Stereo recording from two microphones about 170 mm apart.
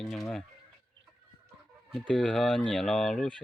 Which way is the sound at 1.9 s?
5° left (ahead or behind).